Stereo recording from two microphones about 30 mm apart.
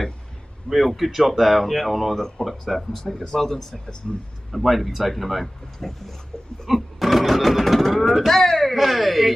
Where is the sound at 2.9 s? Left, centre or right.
Centre.